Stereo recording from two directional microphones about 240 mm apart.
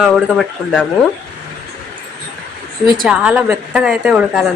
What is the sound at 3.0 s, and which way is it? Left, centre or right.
Speech, centre.